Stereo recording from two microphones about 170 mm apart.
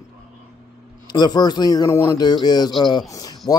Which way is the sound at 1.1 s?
25° left (ahead or behind).